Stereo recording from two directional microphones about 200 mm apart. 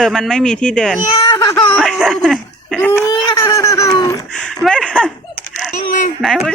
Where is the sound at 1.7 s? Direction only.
Centre (ahead or behind).